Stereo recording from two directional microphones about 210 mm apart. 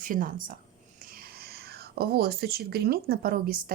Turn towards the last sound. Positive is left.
turn(degrees=-45)  # may be behind; listen again after turning